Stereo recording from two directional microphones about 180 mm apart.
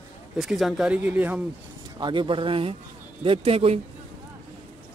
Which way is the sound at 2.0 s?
25° right (ahead or behind).